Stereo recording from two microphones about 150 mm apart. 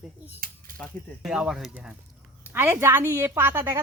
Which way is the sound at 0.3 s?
75° right (ahead or behind).